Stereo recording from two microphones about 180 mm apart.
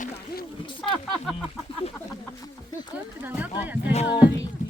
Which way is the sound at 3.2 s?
10° right (ahead or behind).